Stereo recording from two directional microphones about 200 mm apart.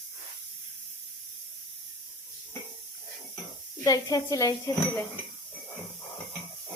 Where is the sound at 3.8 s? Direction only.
15° left (ahead or behind).